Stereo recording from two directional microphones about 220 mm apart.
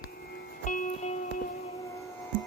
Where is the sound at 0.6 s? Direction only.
35° left (ahead or behind).